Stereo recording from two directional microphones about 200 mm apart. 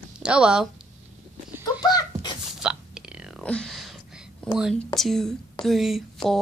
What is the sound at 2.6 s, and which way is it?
Whispering, 5° right (ahead or behind).